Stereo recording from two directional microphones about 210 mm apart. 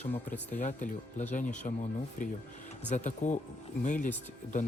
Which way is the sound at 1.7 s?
35° left (ahead or behind).